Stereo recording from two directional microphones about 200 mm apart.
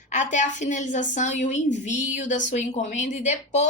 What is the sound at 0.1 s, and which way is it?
A woman's voice, 35° left (ahead or behind).